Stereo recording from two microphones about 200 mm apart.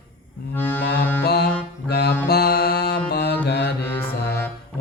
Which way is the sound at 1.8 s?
55° left (ahead or behind).